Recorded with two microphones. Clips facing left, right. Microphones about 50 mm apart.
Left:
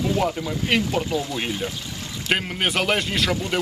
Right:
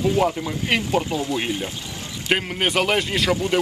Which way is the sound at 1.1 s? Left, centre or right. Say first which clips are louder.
Even; right.